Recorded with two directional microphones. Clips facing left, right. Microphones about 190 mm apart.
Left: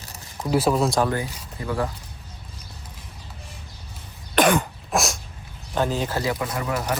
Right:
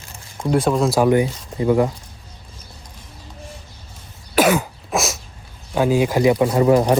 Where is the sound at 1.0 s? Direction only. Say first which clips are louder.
Right 10 dB; 15° right (ahead or behind).